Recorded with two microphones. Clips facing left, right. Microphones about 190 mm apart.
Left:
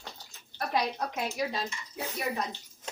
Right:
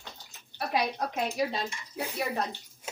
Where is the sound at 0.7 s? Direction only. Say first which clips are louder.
Right 1 dB; 15° right (ahead or behind).